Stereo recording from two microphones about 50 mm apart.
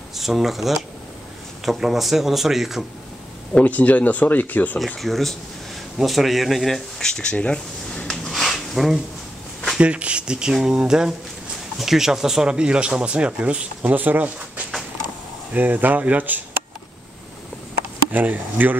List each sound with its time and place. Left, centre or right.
0.1 s speech: centre
3.5 s speech: left
4.7 s speech: centre
8.3 s a sound: centre
9.8 s speech: right
13.9 s speech: right
15.5 s speech: right
18.1 s speech: right